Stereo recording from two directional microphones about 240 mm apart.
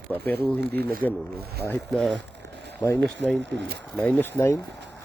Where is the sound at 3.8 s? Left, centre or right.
Centre.